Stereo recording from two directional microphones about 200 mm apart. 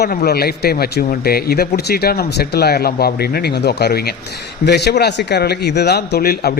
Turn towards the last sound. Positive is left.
turn(degrees=50)  # may be behind; listen again after turning